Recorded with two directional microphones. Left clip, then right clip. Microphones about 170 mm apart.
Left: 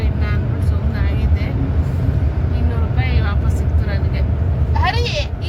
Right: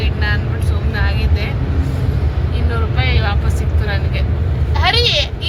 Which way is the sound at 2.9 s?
10° left (ahead or behind).